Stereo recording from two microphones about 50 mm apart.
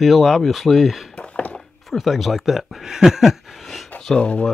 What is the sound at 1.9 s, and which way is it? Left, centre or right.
Speech, centre.